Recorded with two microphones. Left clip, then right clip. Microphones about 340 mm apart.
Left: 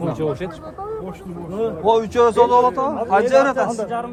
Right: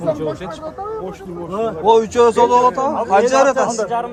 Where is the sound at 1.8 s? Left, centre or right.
Centre.